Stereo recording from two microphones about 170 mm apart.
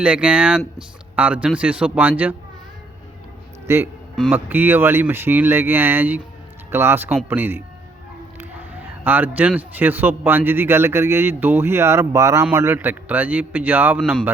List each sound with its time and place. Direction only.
0.0 s a man's voice: 5° right (ahead or behind)
3.7 s a man's voice: 15° right (ahead or behind)